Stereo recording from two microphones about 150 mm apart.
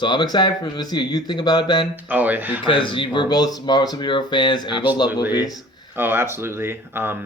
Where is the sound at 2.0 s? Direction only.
10° right (ahead or behind).